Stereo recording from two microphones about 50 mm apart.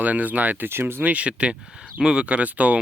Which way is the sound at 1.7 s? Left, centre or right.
Centre.